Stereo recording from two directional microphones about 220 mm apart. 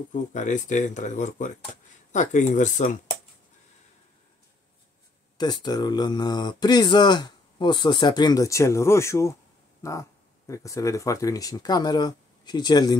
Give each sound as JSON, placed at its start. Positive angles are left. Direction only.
{"t": 0.1, "sound": "speech", "side_deg": 35}
{"t": 5.4, "sound": "speech", "side_deg": 20}